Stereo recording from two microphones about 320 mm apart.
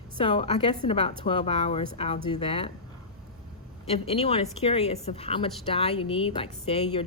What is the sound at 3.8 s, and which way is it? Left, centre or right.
A woman's voice, centre.